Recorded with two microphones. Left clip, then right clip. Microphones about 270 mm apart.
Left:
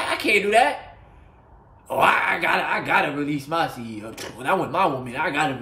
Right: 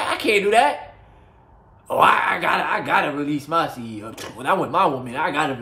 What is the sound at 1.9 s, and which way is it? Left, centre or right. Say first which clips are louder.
Speech: right 3 dB; centre.